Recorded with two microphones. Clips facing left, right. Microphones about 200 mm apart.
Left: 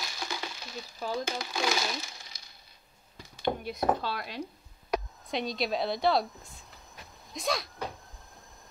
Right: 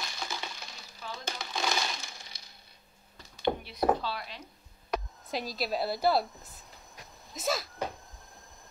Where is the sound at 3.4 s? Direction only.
45° left (ahead or behind).